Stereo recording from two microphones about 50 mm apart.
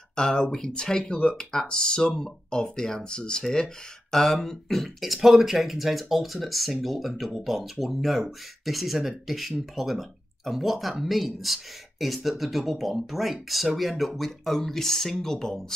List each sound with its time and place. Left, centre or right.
0.1 s speech: centre